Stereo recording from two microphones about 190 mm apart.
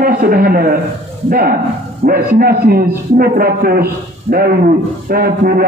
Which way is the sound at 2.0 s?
50° right (ahead or behind).